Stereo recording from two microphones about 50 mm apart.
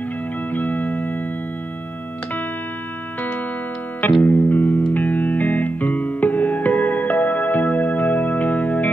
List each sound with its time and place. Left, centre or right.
0.5 s music: left
4.2 s music: left